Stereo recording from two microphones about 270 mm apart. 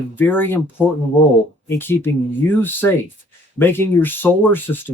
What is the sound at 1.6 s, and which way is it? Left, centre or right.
Speech, centre.